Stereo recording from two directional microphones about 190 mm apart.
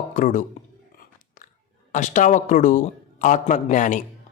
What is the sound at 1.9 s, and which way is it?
A man's voice, 40° left (ahead or behind).